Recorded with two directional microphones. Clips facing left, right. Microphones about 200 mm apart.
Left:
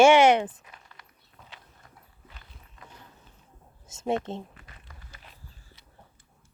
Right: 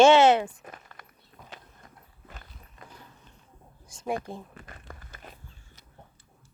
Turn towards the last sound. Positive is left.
turn(degrees=-50)  # may be behind; listen again after turning